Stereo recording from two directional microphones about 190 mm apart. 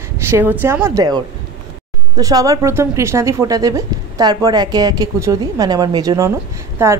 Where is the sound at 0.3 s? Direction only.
10° right (ahead or behind).